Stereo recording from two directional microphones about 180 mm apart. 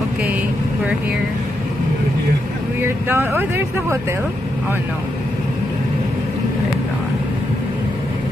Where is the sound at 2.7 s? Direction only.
10° right (ahead or behind).